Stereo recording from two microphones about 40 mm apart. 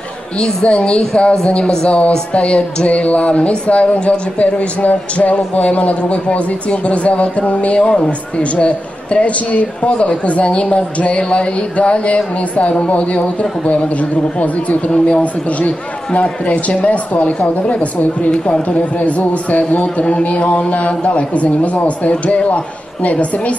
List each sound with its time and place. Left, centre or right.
0.7 s speech: left
18.9 s speech: left